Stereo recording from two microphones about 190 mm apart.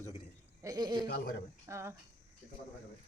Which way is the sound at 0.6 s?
20° right (ahead or behind).